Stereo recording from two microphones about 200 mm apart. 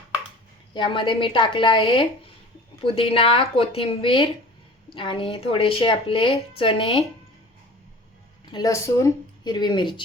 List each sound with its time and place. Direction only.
0.7 s speech: 25° left (ahead or behind)
8.4 s speech: 20° left (ahead or behind)